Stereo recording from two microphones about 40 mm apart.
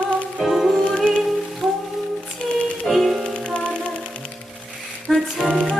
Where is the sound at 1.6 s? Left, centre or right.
Centre.